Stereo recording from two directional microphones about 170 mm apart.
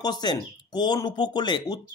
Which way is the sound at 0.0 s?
25° left (ahead or behind).